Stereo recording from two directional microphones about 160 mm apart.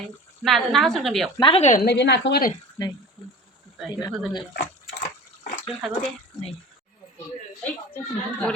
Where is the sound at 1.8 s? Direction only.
90° left.